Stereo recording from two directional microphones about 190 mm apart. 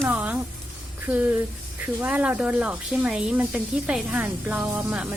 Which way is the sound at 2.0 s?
5° right (ahead or behind).